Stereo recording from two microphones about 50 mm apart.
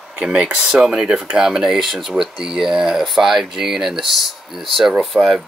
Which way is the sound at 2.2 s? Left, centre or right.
Centre.